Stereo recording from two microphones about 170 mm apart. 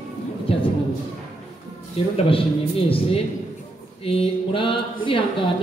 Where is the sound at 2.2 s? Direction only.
35° left (ahead or behind).